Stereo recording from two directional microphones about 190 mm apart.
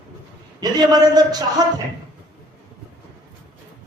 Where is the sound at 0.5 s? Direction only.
20° right (ahead or behind).